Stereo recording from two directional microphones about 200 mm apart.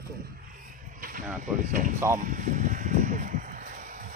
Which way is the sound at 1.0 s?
40° right (ahead or behind).